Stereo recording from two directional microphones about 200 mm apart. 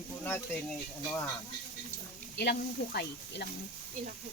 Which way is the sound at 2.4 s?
55° left (ahead or behind).